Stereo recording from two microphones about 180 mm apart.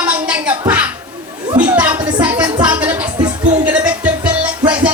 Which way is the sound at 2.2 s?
10° right (ahead or behind).